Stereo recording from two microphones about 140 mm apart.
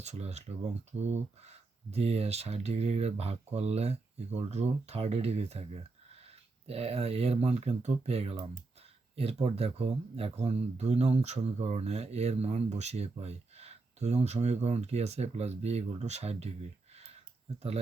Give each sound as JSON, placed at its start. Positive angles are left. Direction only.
{"t": 0.0, "sound": "speech", "side_deg": -50}